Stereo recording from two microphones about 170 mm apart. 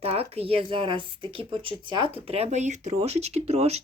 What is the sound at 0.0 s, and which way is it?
Speech, 35° right (ahead or behind).